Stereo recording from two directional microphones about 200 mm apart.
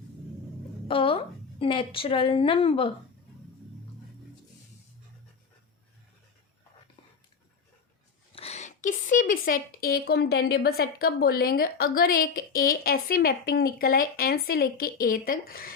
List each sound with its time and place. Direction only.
0.9 s a woman's voice: 25° left (ahead or behind)
8.4 s speech: 35° left (ahead or behind)